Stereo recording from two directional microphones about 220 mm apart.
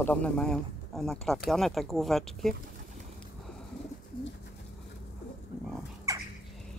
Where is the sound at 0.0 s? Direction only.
5° left (ahead or behind).